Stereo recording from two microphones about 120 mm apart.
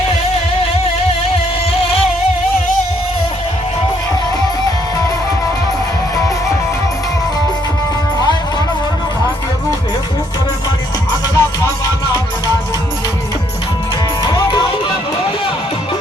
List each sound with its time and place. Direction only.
11.1 s music: 30° left (ahead or behind)
14.3 s music: 35° left (ahead or behind)